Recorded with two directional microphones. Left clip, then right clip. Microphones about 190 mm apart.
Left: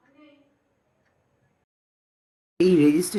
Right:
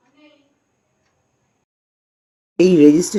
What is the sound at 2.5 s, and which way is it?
Speech, 10° right (ahead or behind).